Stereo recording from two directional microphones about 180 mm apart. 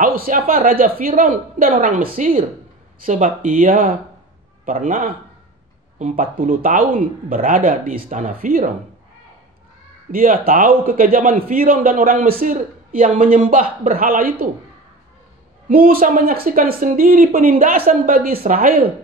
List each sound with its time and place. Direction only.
0.0 s a sound: 50° right (ahead or behind)
0.5 s a man's voice: 50° right (ahead or behind)
10.1 s a man's voice: 50° right (ahead or behind)
15.7 s a man's voice: 55° right (ahead or behind)